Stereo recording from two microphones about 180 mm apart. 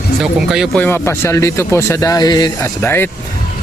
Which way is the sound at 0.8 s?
15° left (ahead or behind).